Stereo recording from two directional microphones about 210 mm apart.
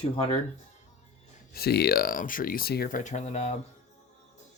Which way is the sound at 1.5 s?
50° left (ahead or behind).